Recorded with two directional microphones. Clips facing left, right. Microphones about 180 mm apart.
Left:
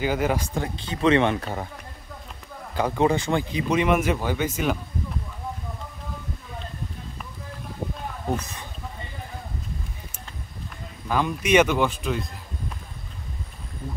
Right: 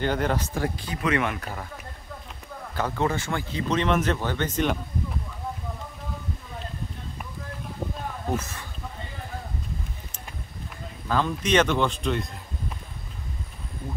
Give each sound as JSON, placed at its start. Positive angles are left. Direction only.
{"t": 0.0, "sound": "speech", "side_deg": 5}
{"t": 0.6, "sound": "speech", "side_deg": 25}
{"t": 2.7, "sound": "speech", "side_deg": 15}
{"t": 8.4, "sound": "speech", "side_deg": 15}
{"t": 11.1, "sound": "speech", "side_deg": 10}